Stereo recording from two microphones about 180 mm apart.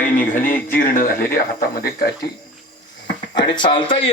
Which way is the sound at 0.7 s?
50° left (ahead or behind).